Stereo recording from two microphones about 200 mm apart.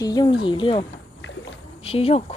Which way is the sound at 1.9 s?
30° left (ahead or behind).